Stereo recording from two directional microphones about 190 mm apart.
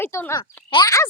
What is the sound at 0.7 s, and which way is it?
Speech, 20° left (ahead or behind).